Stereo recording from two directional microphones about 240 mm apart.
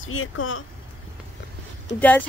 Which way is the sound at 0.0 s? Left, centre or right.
Left.